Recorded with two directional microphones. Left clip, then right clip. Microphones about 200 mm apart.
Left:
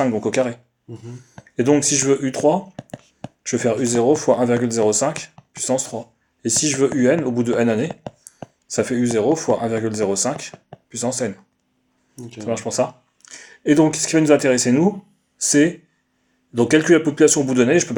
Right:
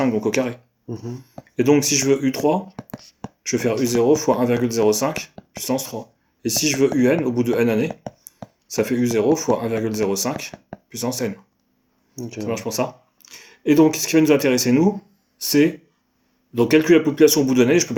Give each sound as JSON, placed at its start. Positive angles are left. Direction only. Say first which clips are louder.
{"t": 0.0, "sound": "speech", "louder": "left 1 dB", "side_deg": 35}
{"t": 0.9, "sound": "speech", "louder": "right 6 dB", "side_deg": -50}
{"t": 1.5, "sound": "speech", "louder": "even", "side_deg": 35}
{"t": 3.4, "sound": "speech", "louder": "left 1 dB", "side_deg": 35}
{"t": 12.4, "sound": "speech", "louder": "left 3 dB", "side_deg": 35}